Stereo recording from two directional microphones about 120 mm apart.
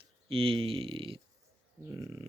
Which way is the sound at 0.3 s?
50° right (ahead or behind).